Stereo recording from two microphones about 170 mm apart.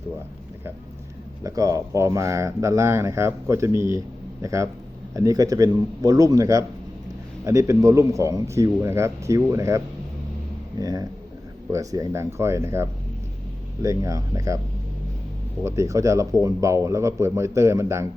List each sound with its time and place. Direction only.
1.5 s a man's voice: 20° right (ahead or behind)
15.6 s speech: 15° right (ahead or behind)